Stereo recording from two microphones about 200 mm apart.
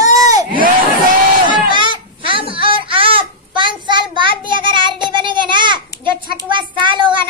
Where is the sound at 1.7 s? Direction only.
25° right (ahead or behind).